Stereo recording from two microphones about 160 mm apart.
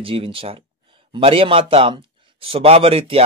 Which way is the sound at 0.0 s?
35° right (ahead or behind).